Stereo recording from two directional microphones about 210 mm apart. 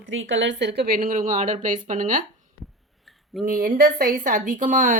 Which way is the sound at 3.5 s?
40° right (ahead or behind).